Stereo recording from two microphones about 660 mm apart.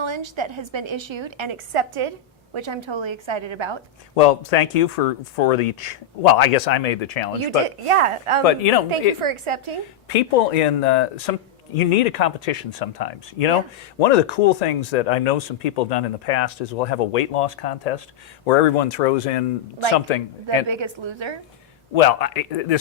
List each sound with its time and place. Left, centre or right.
0.0 s a woman's voice: right
4.1 s speech: left
7.9 s a woman's voice: right
8.4 s a man's voice: left
9.2 s a woman's voice: right
10.1 s speech: left
14.0 s speech: left
18.4 s speech: left
20.1 s speech: left
20.7 s a woman's voice: right
21.9 s a man's voice: left